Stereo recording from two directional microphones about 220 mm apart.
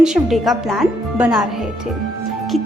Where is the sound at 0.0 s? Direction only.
Centre (ahead or behind).